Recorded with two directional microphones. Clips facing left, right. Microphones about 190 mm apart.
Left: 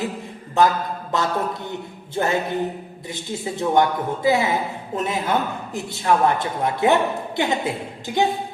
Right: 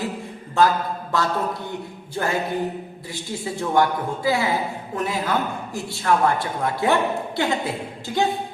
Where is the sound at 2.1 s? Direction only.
20° left (ahead or behind).